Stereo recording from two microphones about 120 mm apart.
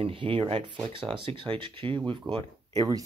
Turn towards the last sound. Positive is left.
turn(degrees=-35)  # may be behind; listen again after turning